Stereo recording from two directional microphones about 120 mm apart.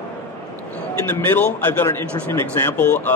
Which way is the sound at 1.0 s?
15° left (ahead or behind).